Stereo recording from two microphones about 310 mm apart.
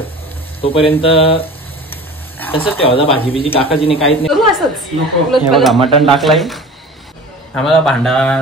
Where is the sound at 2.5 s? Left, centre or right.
Centre.